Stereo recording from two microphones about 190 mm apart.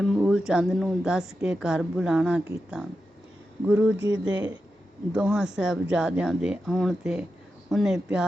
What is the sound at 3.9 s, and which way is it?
Speech, 75° right (ahead or behind).